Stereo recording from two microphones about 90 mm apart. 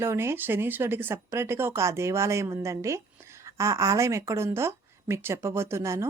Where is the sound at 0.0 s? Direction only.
30° right (ahead or behind).